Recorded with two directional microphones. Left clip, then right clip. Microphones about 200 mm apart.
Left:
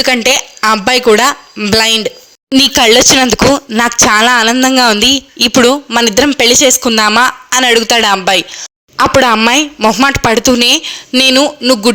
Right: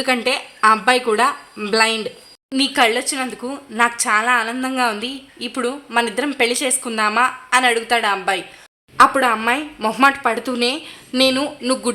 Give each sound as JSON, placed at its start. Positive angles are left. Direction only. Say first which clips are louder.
{"t": 0.0, "sound": "a woman's voice", "louder": "left 9 dB", "side_deg": 40}
{"t": 9.7, "sound": "a man's voice", "louder": "left 11 dB", "side_deg": 20}
{"t": 10.0, "sound": "a man's voice", "louder": "left 2 dB", "side_deg": 35}